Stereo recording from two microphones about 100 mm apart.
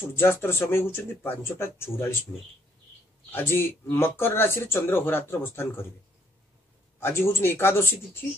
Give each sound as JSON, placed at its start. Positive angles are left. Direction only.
{"t": 0.1, "sound": "speech", "side_deg": 25}
{"t": 2.3, "sound": "speech", "side_deg": 0}
{"t": 3.3, "sound": "speech", "side_deg": 20}
{"t": 7.0, "sound": "speech", "side_deg": 25}